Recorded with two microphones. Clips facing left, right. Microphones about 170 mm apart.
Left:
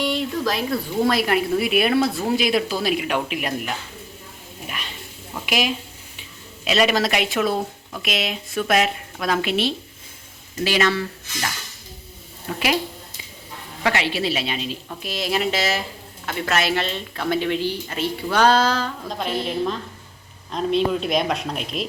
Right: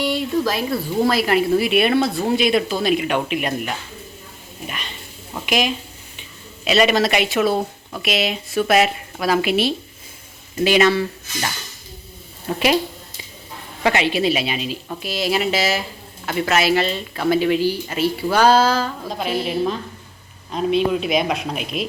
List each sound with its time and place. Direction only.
0.0 s speech: 5° right (ahead or behind)
4.6 s a sound: centre (ahead or behind)
5.5 s a woman's voice: 5° left (ahead or behind); by 11.0 s 15° right (ahead or behind)
12.5 s a woman's voice: 30° right (ahead or behind)
13.8 s a woman's voice: 20° right (ahead or behind); by 21.8 s 5° right (ahead or behind)